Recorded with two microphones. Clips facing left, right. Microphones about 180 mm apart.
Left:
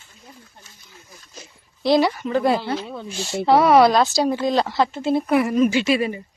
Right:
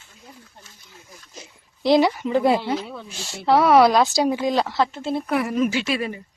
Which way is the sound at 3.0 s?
Centre (ahead or behind).